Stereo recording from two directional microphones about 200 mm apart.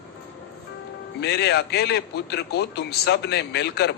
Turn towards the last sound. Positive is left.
turn(degrees=55)  # may be behind; listen again after turning